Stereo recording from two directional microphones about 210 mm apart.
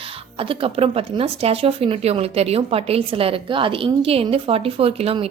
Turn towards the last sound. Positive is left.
turn(degrees=-30)  # may be behind; listen again after turning